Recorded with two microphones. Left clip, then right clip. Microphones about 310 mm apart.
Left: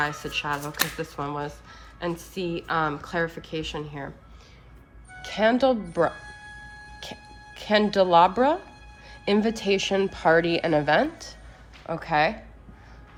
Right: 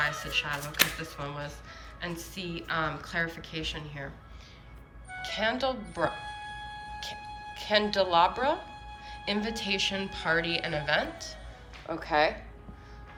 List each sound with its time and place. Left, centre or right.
0.0 s a woman's voice: centre
5.2 s a woman's voice: centre
7.5 s a woman's voice: centre